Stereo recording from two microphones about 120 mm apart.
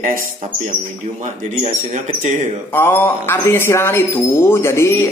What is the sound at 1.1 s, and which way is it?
Speech, 80° right.